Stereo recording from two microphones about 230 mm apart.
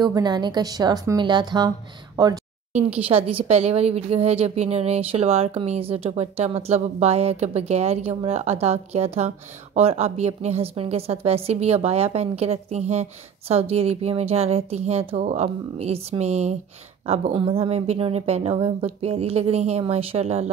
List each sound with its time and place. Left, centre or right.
0.0 s a woman's voice: centre